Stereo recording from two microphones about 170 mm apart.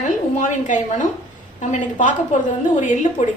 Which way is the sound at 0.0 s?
45° left (ahead or behind).